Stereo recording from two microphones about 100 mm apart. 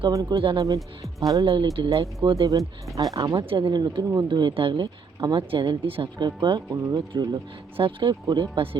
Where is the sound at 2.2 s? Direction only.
55° right (ahead or behind).